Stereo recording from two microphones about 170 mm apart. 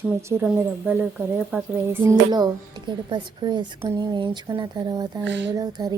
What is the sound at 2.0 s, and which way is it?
Speech, 25° right (ahead or behind).